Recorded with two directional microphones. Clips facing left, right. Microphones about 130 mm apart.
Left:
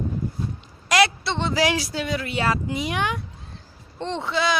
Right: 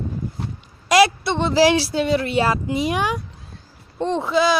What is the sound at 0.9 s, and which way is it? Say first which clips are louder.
Speech: right 5 dB; 20° right (ahead or behind).